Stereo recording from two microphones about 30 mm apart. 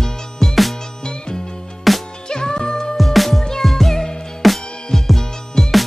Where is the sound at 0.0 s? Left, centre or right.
Centre.